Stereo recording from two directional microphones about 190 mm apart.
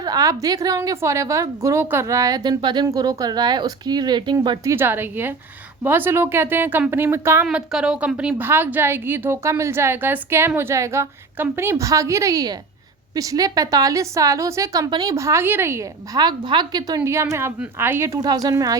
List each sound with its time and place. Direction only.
0.0 s a woman's voice: 20° right (ahead or behind)